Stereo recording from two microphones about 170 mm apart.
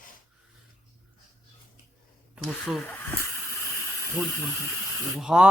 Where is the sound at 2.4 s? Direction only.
Centre (ahead or behind).